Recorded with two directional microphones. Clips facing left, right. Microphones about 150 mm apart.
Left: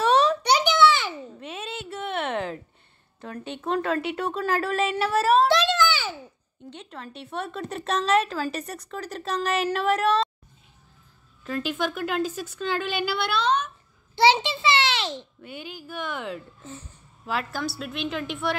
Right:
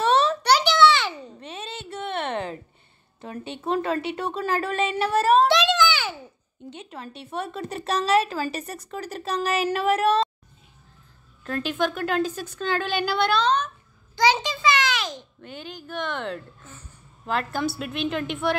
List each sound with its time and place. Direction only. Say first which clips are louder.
0.0 s a sound: even; 10° left (ahead or behind)
3.2 s speech: even; 5° right (ahead or behind)
5.5 s a sound: right 1 dB; 90° right
6.7 s speech: right 1 dB; 5° right (ahead or behind)
11.4 s speech: right 2 dB; 5° left (ahead or behind)
14.1 s a child's voice: left 2 dB; 25° left (ahead or behind)
15.4 s speech: even; 10° left (ahead or behind)